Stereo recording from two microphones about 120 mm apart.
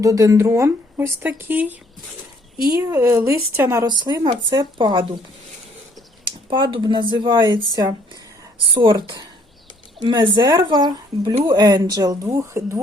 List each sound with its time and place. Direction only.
0.0 s speech: 30° right (ahead or behind)
2.7 s speech: 25° right (ahead or behind)
4.0 s a woman's voice: 40° right (ahead or behind)
6.5 s a woman's voice: 40° right (ahead or behind)
8.7 s a woman's voice: 45° right (ahead or behind); by 12.8 s 25° right (ahead or behind)